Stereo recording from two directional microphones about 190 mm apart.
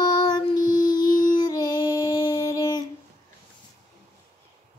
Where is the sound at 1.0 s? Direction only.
45° left (ahead or behind).